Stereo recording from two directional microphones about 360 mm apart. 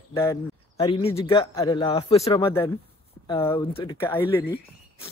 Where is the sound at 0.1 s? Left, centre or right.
Centre.